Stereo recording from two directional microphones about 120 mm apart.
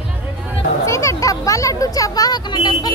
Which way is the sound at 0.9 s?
25° left (ahead or behind).